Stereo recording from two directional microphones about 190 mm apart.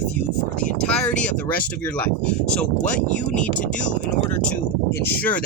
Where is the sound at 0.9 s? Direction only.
5° left (ahead or behind).